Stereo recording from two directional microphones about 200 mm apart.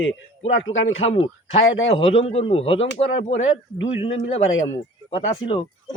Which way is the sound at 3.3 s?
75° left (ahead or behind).